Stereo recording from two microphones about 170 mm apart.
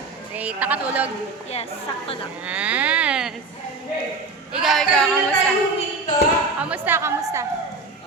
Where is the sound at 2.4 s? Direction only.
10° right (ahead or behind).